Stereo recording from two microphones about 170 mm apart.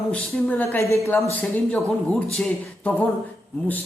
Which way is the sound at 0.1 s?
10° left (ahead or behind).